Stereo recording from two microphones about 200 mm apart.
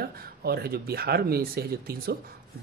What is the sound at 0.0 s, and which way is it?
Speech, 50° right (ahead or behind).